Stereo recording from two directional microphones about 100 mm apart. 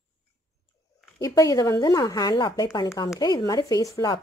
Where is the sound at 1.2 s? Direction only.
35° left (ahead or behind).